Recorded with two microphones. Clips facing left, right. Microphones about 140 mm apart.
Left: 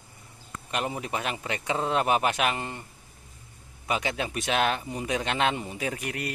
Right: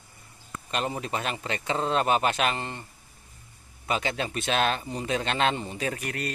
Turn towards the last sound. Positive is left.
turn(degrees=15)  # may be behind; listen again after turning